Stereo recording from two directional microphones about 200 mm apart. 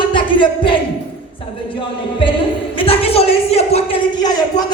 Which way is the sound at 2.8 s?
30° left (ahead or behind).